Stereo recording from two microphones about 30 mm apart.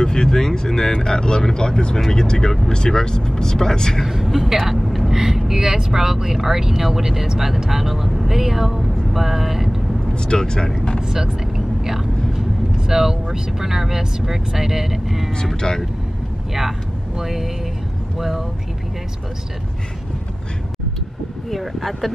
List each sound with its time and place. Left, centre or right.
0.0 s speech: left
4.1 s speech: centre
5.1 s speech: centre
10.1 s speech: left
11.0 s vehicle: centre
12.7 s speech: centre
17.2 s speech: centre
21.5 s speech: centre